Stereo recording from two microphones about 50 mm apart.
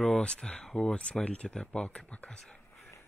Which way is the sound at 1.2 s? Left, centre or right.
Left.